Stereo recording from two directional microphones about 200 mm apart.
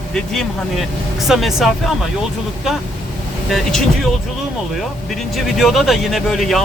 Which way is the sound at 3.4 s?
Centre (ahead or behind).